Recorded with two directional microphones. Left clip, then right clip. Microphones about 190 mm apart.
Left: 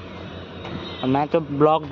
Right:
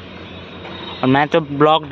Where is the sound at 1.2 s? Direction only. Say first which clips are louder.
Right 4 dB; 10° right (ahead or behind).